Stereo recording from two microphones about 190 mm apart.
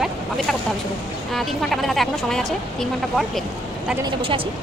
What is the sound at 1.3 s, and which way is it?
Speech, centre (ahead or behind).